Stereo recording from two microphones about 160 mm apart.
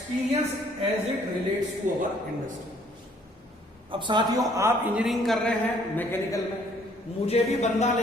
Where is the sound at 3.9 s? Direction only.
30° right (ahead or behind).